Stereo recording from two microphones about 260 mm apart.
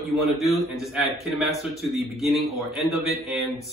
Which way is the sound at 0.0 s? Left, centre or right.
Centre.